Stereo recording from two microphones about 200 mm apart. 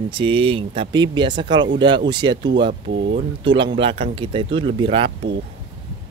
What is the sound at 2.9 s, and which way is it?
Speech, 60° right (ahead or behind).